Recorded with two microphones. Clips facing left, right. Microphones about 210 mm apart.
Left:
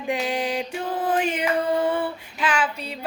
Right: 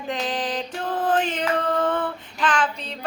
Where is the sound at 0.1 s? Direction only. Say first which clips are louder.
Left 2 dB; 10° left (ahead or behind).